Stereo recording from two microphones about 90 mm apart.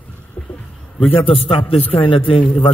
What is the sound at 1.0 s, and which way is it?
Music, 90° left.